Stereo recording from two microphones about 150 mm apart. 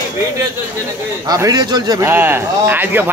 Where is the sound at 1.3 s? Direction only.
25° right (ahead or behind).